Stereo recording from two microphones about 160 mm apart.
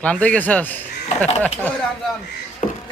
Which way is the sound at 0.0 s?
10° left (ahead or behind).